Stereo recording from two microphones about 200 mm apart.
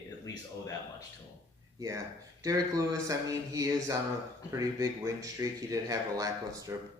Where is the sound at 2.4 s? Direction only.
15° right (ahead or behind).